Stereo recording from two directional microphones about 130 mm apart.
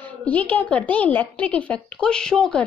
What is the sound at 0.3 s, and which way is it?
A woman's voice, 10° left (ahead or behind).